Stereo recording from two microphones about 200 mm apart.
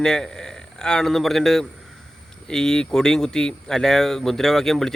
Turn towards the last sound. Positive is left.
turn(degrees=0)  # may be behind; listen again after turning